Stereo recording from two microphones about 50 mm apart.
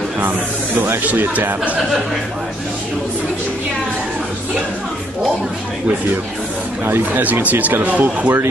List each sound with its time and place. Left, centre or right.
1.0 s speech: right
7.4 s speech: right